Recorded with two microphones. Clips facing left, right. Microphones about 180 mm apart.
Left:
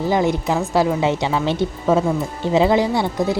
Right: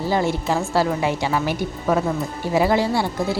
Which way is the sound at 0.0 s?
20° left (ahead or behind).